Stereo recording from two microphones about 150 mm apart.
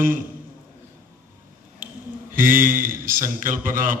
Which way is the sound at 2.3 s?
65° right (ahead or behind).